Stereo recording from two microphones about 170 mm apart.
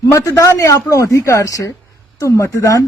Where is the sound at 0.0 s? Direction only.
20° left (ahead or behind).